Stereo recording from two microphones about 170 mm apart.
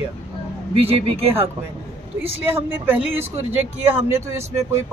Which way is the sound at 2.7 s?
10° right (ahead or behind).